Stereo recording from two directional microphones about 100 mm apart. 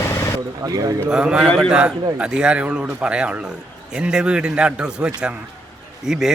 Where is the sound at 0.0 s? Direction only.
25° left (ahead or behind).